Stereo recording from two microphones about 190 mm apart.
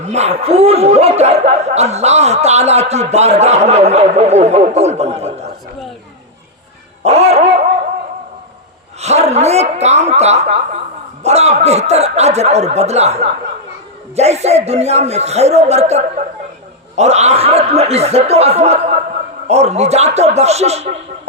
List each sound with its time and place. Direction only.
0.0 s speech: 35° right (ahead or behind)
7.0 s dog: 35° right (ahead or behind)
9.0 s speech: 35° right (ahead or behind)